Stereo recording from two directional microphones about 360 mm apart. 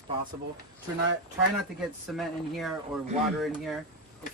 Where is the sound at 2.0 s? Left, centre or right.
Centre.